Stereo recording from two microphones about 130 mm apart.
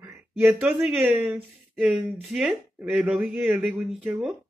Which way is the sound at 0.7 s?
5° right (ahead or behind).